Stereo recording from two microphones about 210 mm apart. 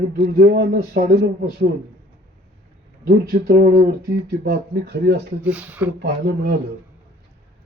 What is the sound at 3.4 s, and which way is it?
Speech, 45° right (ahead or behind).